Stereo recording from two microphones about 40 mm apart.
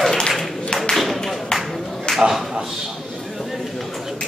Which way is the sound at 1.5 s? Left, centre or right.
Centre.